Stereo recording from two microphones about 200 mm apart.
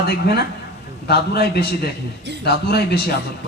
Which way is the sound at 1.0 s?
50° left (ahead or behind).